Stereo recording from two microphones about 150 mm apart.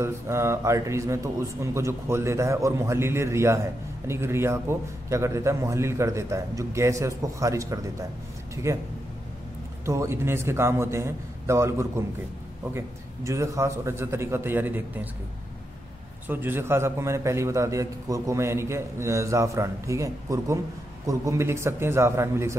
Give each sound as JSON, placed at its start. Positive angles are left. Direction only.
{"t": 0.0, "sound": "a man's voice", "side_deg": -20}
{"t": 9.8, "sound": "a man's voice", "side_deg": -20}
{"t": 16.3, "sound": "a man's voice", "side_deg": -15}